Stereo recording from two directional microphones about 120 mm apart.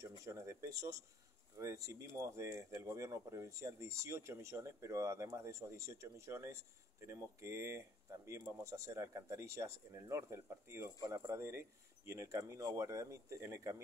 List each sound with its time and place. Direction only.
0.2 s speech: 25° right (ahead or behind)